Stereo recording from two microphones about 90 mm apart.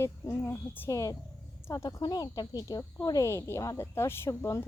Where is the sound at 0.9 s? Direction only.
40° left (ahead or behind).